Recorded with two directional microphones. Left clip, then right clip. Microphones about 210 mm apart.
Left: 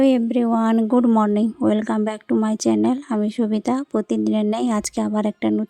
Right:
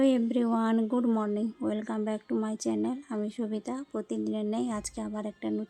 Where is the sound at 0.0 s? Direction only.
30° left (ahead or behind).